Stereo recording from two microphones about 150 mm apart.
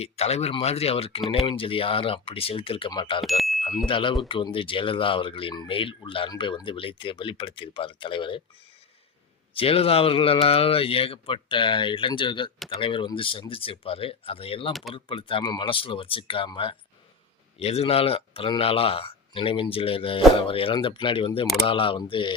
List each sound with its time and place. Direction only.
0.0 s speech: 45° left (ahead or behind)
3.2 s a sound: centre (ahead or behind)
3.8 s speech: 35° left (ahead or behind)
9.6 s speech: 40° left (ahead or behind)
14.7 s speech: centre (ahead or behind)
14.9 s speech: 35° left (ahead or behind)